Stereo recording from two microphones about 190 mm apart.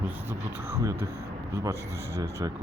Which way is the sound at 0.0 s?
15° right (ahead or behind).